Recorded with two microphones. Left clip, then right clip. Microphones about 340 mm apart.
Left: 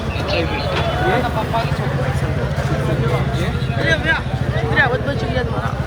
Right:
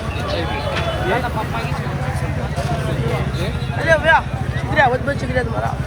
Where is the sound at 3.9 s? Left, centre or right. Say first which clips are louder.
Right 5 dB; centre.